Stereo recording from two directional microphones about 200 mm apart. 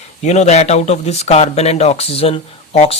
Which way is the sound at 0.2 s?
35° left (ahead or behind).